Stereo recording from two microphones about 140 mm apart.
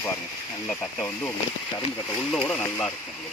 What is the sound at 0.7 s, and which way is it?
Speech, 10° left (ahead or behind).